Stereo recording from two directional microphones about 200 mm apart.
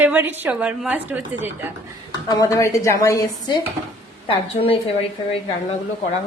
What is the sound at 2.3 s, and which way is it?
A woman's voice, 15° left (ahead or behind).